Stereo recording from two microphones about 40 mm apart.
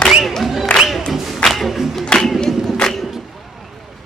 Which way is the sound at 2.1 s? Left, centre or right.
Left.